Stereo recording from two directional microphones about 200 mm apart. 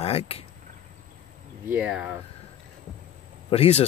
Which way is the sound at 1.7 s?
5° right (ahead or behind).